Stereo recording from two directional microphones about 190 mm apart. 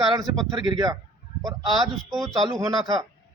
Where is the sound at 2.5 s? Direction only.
20° right (ahead or behind).